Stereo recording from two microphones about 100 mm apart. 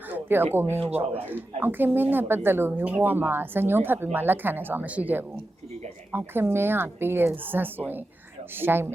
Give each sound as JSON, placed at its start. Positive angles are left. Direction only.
{"t": 0.1, "sound": "a sound", "side_deg": -20}
{"t": 0.5, "sound": "speech", "side_deg": -20}
{"t": 0.8, "sound": "speech", "side_deg": -90}
{"t": 1.6, "sound": "speech", "side_deg": -20}